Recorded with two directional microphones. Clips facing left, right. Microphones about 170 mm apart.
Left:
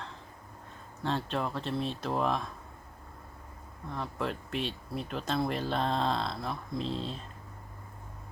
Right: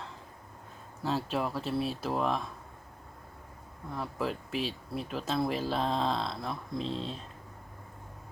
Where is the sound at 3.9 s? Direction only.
5° right (ahead or behind).